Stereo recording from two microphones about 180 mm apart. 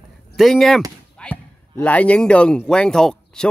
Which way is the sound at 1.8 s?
10° left (ahead or behind).